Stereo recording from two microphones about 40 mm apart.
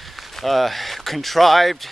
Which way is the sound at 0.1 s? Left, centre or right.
Centre.